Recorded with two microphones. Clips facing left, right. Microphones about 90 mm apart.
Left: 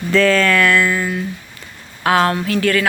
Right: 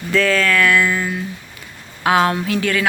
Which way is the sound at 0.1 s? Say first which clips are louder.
Left 3 dB; 5° right (ahead or behind).